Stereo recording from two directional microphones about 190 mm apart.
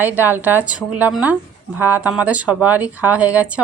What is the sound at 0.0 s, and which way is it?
A woman's voice, 10° right (ahead or behind).